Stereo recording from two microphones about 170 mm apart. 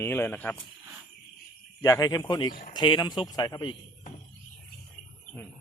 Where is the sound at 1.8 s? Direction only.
20° left (ahead or behind).